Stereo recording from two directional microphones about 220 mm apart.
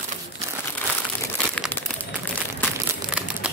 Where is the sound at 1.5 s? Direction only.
5° left (ahead or behind).